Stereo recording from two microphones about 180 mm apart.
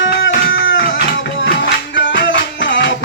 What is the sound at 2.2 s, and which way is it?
Music, 90° left.